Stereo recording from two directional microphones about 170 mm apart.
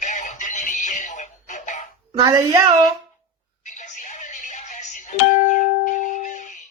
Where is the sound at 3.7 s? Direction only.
45° left (ahead or behind).